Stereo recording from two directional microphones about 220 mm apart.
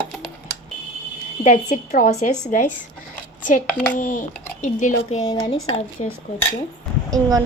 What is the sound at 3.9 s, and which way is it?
A woman's voice, 35° left (ahead or behind).